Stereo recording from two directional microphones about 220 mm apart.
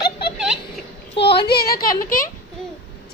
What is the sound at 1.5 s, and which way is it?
Speech, 45° left (ahead or behind).